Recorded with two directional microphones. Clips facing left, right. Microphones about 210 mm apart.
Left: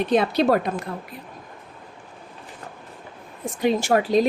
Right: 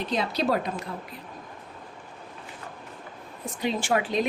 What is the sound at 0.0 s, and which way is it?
Speech, 60° left (ahead or behind).